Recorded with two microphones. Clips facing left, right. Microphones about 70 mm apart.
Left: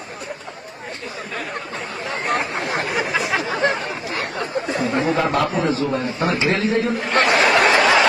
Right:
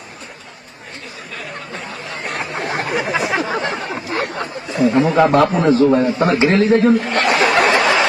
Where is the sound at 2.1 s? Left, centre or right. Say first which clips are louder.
Left 4 dB; left.